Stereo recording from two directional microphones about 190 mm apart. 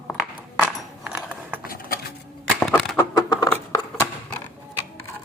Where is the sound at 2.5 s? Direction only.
Centre (ahead or behind).